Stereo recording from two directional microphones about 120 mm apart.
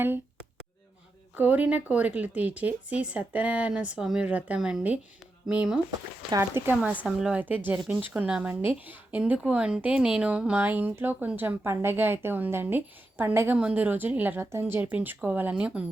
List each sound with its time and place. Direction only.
1.4 s speech: 15° right (ahead or behind)
6.3 s speech: 20° right (ahead or behind)